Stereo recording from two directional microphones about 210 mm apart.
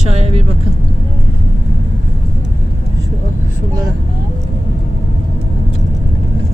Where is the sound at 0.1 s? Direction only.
30° right (ahead or behind).